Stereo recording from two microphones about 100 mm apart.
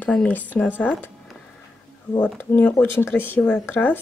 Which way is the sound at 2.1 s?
20° left (ahead or behind).